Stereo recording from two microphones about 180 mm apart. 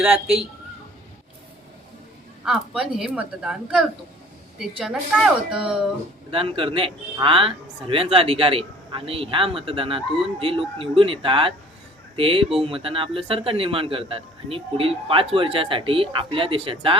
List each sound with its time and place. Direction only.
0.0 s speech: 10° right (ahead or behind)
2.4 s a woman's voice: 5° right (ahead or behind)
6.3 s a man's voice: 30° right (ahead or behind)